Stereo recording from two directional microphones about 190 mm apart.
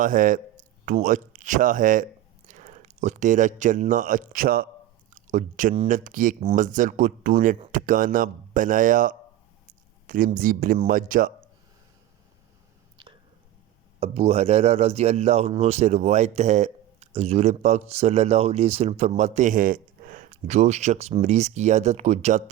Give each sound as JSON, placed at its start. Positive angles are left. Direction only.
{"t": 0.0, "sound": "a man's voice", "side_deg": -45}
{"t": 13.0, "sound": "whispering", "side_deg": -25}
{"t": 14.0, "sound": "speech", "side_deg": -30}